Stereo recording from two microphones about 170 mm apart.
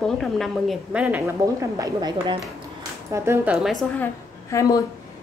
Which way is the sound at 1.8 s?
25° right (ahead or behind).